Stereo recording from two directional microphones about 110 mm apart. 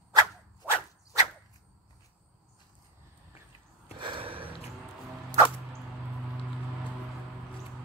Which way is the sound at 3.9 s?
50° right (ahead or behind).